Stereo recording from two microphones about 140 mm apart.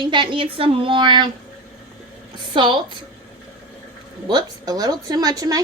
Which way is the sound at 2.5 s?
35° right (ahead or behind).